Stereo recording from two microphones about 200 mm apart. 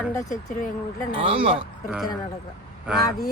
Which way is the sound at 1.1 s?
25° right (ahead or behind).